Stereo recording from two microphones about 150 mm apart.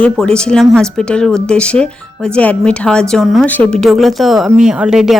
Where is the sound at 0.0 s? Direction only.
5° left (ahead or behind).